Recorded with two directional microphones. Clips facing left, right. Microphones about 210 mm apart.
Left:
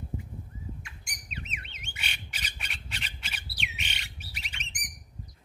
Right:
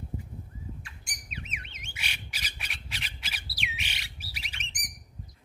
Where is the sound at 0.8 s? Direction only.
35° right (ahead or behind).